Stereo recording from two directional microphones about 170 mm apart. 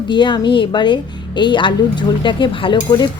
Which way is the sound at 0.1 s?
25° left (ahead or behind).